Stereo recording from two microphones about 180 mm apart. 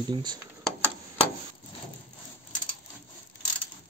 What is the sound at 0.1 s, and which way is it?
Speech, 25° right (ahead or behind).